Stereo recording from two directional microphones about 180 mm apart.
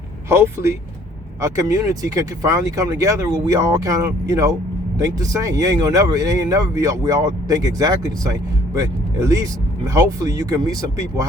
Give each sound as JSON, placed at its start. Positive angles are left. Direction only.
{"t": 0.3, "sound": "speech", "side_deg": -15}